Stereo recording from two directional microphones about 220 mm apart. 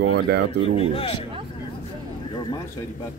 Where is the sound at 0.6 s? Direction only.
25° left (ahead or behind).